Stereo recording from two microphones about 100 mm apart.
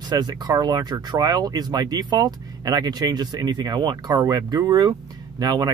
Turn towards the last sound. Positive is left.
turn(degrees=-40)  # may be behind; listen again after turning